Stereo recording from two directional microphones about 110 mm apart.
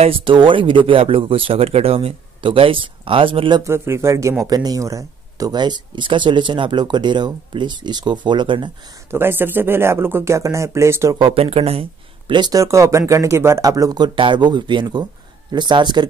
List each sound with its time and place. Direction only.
0.0 s speech: 55° right (ahead or behind)
3.6 s speech: 25° right (ahead or behind); by 8.6 s 45° right (ahead or behind)
9.1 s speech: 20° right (ahead or behind)
11.1 s speech: 50° right (ahead or behind)
12.4 s speech: 35° right (ahead or behind)